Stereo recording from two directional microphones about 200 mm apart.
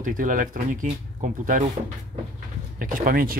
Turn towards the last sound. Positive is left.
turn(degrees=-45)  # may be behind; listen again after turning